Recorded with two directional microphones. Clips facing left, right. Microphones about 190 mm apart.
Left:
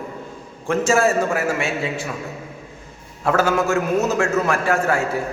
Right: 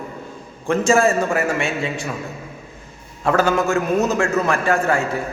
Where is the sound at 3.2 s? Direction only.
5° left (ahead or behind).